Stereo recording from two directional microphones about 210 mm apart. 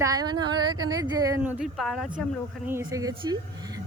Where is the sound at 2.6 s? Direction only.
15° right (ahead or behind).